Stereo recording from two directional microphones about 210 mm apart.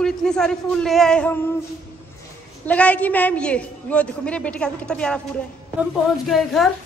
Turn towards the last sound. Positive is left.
turn(degrees=0)  # may be behind; listen again after turning